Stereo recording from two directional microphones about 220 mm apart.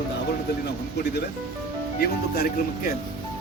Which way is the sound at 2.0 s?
45° left (ahead or behind).